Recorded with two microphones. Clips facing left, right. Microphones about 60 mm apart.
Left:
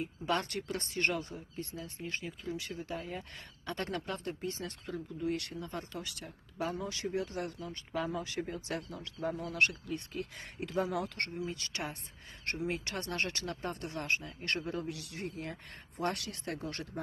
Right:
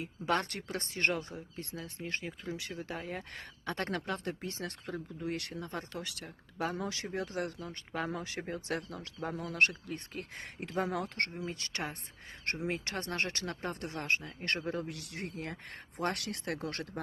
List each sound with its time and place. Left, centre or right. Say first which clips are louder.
0.0 s speech: right 1 dB; right
9.2 s speech: right 1 dB; right
10.4 s speech: even; right